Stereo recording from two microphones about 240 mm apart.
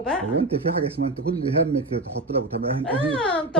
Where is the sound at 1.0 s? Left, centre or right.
Right.